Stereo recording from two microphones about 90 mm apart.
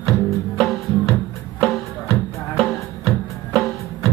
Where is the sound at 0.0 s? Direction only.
Centre (ahead or behind).